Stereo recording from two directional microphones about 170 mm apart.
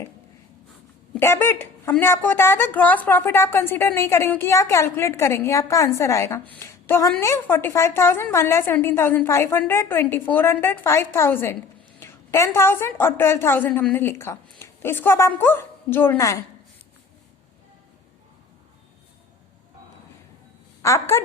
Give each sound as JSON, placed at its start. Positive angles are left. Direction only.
{"t": 1.1, "sound": "a woman's voice", "side_deg": 15}
{"t": 20.8, "sound": "a woman's voice", "side_deg": 15}